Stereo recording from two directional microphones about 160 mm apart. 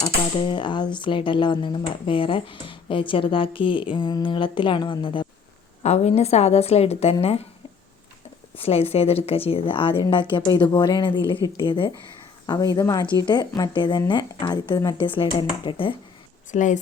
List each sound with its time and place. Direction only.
0.0 s speech: 30° left (ahead or behind)
5.8 s speech: 45° left (ahead or behind)
8.5 s speech: 35° left (ahead or behind)
16.5 s a woman's voice: 50° left (ahead or behind)